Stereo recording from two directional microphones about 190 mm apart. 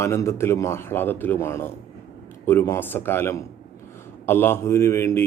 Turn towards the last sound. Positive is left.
turn(degrees=15)  # may be behind; listen again after turning